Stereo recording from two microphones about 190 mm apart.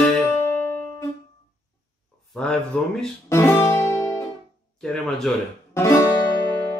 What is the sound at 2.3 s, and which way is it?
Speech, 5° left (ahead or behind).